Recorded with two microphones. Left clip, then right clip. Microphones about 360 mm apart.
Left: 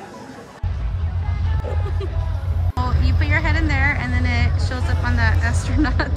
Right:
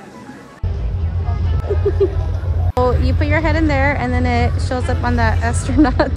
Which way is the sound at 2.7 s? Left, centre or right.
Centre.